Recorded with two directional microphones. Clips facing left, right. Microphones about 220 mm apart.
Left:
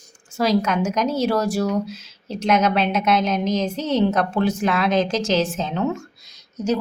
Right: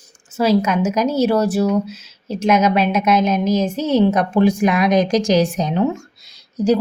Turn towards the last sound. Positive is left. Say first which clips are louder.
# right 6 dB
turn(degrees=-35)  # may be behind; listen again after turning